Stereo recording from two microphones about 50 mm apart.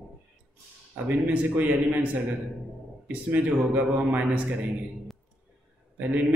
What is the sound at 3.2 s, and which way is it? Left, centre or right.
A man's voice, right.